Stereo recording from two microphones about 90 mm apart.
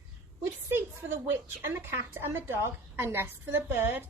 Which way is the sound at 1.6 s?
30° right (ahead or behind).